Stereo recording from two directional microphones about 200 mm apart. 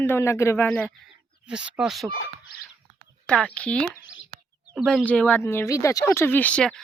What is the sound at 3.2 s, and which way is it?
Speech, 5° left (ahead or behind).